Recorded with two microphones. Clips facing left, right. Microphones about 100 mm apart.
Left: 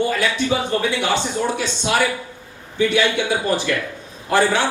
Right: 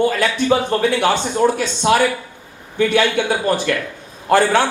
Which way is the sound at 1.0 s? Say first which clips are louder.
Right 5 dB; 50° right (ahead or behind).